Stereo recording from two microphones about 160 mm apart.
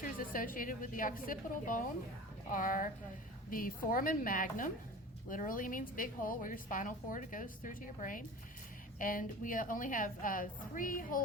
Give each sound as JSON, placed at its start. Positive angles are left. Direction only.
{"t": 0.0, "sound": "a woman's voice", "side_deg": 60}